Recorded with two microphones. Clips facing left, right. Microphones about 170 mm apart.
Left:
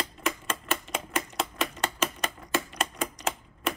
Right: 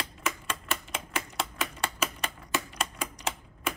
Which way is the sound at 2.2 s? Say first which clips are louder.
Left 3 dB; 10° right (ahead or behind).